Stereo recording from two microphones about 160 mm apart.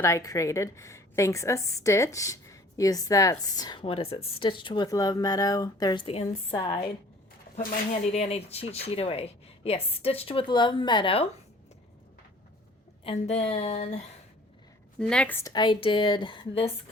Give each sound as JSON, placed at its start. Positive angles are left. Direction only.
{"t": 0.0, "sound": "a woman's voice", "side_deg": 20}
{"t": 8.0, "sound": "speech", "side_deg": 40}
{"t": 13.1, "sound": "speech", "side_deg": 40}
{"t": 14.9, "sound": "a woman's voice", "side_deg": 5}
{"t": 15.5, "sound": "speech", "side_deg": 30}